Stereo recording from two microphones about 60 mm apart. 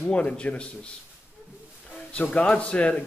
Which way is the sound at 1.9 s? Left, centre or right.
Centre.